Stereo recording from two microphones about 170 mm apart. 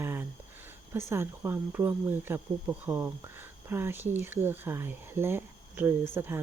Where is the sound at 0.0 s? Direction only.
15° right (ahead or behind).